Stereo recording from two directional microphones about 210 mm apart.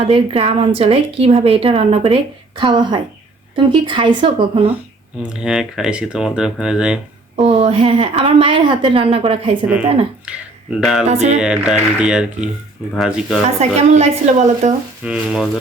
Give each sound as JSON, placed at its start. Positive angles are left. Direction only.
{"t": 0.1, "sound": "a woman's voice", "side_deg": -25}
{"t": 5.3, "sound": "speech", "side_deg": -5}
{"t": 7.3, "sound": "a woman's voice", "side_deg": -30}
{"t": 10.2, "sound": "speech", "side_deg": -5}
{"t": 11.1, "sound": "a woman's voice", "side_deg": -30}
{"t": 11.3, "sound": "speech", "side_deg": -5}
{"t": 13.6, "sound": "a woman's voice", "side_deg": -30}
{"t": 15.0, "sound": "speech", "side_deg": -5}